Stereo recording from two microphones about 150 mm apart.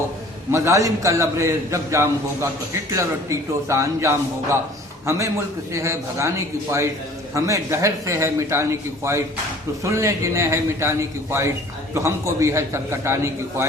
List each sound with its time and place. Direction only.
0.5 s a man's voice: 20° right (ahead or behind)